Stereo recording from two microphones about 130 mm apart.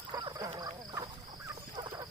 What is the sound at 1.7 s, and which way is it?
Fowl, 30° right (ahead or behind).